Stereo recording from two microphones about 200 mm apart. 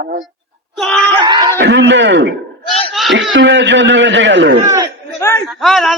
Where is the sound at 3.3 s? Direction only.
65° right (ahead or behind).